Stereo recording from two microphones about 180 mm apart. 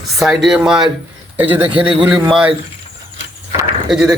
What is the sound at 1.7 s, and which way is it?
Speech, 30° right (ahead or behind).